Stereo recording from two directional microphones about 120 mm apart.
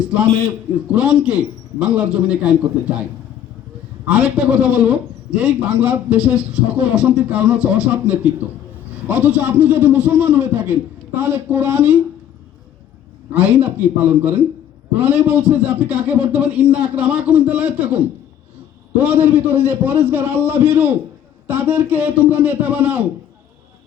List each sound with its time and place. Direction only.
0.9 s a man's voice: 10° right (ahead or behind)
4.0 s a man's voice: 10° right (ahead or behind)
13.3 s a man's voice: 15° right (ahead or behind)